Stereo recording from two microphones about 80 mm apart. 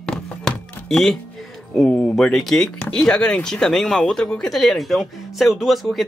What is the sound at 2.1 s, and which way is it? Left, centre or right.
Speech, centre.